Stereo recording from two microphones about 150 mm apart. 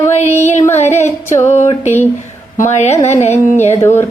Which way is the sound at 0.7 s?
50° left (ahead or behind).